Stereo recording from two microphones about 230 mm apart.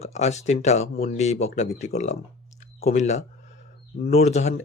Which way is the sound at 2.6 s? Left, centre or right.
Left.